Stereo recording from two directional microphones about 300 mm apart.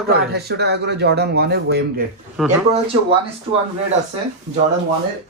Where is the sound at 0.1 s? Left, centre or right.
Right.